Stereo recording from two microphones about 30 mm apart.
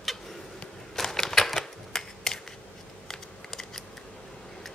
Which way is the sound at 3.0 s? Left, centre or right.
Centre.